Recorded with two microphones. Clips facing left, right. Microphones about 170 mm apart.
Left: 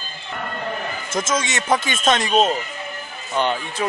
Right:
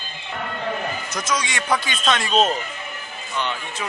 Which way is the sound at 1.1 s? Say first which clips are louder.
Left 5 dB; 50° left (ahead or behind).